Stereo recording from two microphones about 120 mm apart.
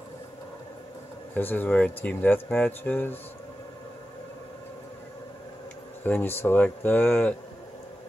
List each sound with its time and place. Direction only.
1.3 s speech: 15° left (ahead or behind)
6.0 s speech: 15° left (ahead or behind)